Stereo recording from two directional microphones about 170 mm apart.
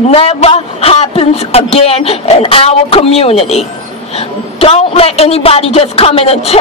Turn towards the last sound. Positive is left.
turn(degrees=35)  # may be behind; listen again after turning